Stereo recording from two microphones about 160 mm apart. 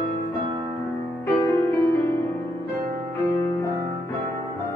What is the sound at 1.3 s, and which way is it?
Music, 15° left (ahead or behind).